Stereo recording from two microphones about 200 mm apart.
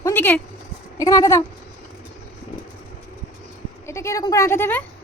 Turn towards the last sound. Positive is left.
turn(degrees=10)  # may be behind; listen again after turning